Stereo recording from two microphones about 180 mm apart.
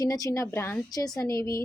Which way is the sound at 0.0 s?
20° left (ahead or behind).